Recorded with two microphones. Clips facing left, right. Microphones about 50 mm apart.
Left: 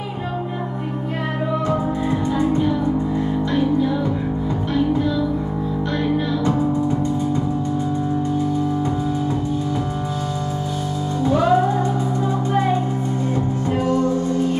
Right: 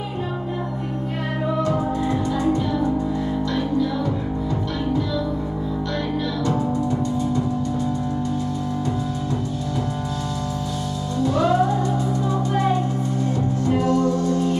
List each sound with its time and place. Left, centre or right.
2.3 s music: left
6.4 s music: left
11.2 s music: left
13.7 s music: left